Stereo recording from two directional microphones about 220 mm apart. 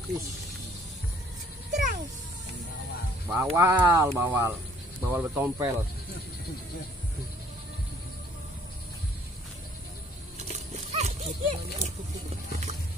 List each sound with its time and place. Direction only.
1.7 s a sound: 35° right (ahead or behind)
3.3 s speech: 10° right (ahead or behind)
10.5 s dog: 30° right (ahead or behind)